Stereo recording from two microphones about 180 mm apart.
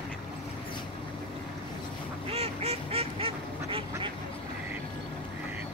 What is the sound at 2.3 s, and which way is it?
Goose, 35° right (ahead or behind).